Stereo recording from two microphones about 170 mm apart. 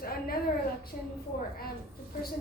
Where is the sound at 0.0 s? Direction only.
60° left (ahead or behind).